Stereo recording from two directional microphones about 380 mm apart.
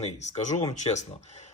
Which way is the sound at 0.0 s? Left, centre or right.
Centre.